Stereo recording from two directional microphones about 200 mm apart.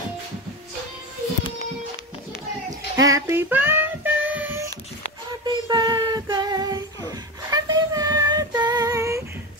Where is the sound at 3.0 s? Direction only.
15° right (ahead or behind).